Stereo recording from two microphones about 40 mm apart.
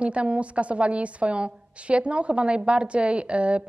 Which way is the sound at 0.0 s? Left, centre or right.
Right.